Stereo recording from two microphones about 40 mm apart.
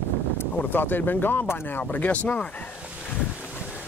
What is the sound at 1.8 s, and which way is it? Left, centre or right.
Speech, left.